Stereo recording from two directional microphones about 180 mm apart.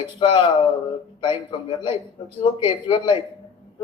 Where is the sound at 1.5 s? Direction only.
25° left (ahead or behind).